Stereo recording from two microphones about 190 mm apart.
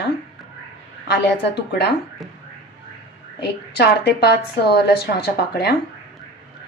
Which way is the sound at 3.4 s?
60° left (ahead or behind).